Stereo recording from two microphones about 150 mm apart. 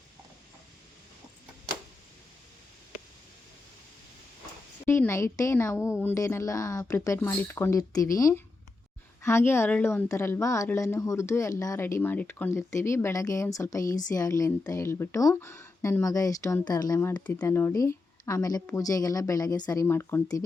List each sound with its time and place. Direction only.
4.9 s a woman's voice: 15° left (ahead or behind)